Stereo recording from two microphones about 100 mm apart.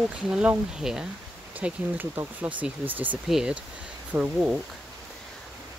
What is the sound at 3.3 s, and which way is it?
Speech, 5° right (ahead or behind).